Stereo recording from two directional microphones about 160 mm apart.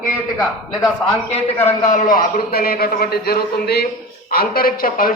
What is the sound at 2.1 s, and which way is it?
A man's voice, 70° left (ahead or behind).